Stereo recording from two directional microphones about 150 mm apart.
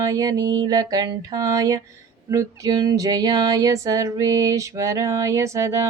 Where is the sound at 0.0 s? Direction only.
20° right (ahead or behind).